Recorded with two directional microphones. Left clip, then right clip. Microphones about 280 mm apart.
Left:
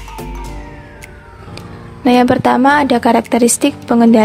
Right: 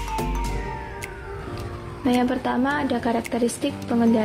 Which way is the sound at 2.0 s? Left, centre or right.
Left.